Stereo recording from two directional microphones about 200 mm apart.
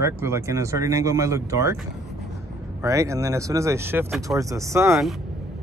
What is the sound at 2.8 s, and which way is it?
Speech, 15° right (ahead or behind).